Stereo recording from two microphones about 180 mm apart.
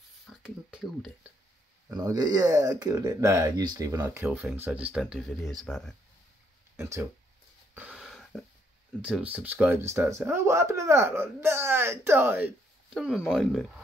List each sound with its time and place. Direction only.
0.4 s speech: 5° right (ahead or behind)
1.9 s speech: 20° right (ahead or behind); by 5.9 s 5° left (ahead or behind)
6.8 s speech: 15° right (ahead or behind)
7.7 s a sound: 5° right (ahead or behind)
9.0 s speech: 5° right (ahead or behind)